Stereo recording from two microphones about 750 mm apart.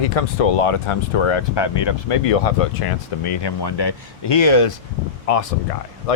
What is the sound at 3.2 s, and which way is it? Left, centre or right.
Speech, left.